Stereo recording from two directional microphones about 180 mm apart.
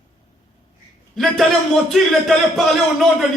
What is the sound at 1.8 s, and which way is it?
A man's voice, centre (ahead or behind).